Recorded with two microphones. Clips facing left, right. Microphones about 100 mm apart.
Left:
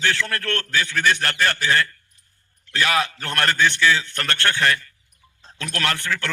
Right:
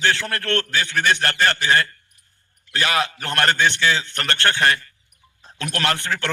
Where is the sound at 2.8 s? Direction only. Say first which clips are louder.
Even; 30° right (ahead or behind).